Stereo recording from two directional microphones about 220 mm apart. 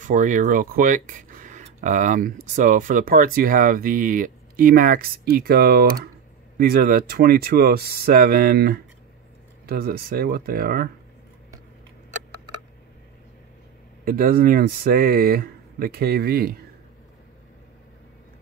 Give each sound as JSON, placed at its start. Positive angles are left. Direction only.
{"t": 0.0, "sound": "speech", "side_deg": -35}
{"t": 12.3, "sound": "tick", "side_deg": -90}
{"t": 14.0, "sound": "speech", "side_deg": -40}